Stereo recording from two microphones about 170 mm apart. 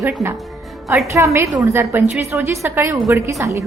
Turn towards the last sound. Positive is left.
turn(degrees=-20)  # may be behind; listen again after turning